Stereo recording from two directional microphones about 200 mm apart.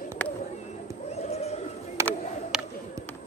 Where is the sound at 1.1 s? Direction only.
30° left (ahead or behind).